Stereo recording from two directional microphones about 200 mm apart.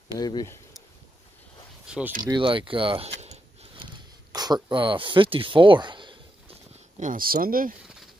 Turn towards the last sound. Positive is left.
turn(degrees=-45)  # may be behind; listen again after turning